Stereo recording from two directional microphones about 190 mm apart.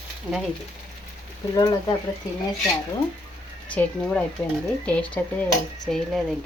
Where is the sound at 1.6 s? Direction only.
20° left (ahead or behind).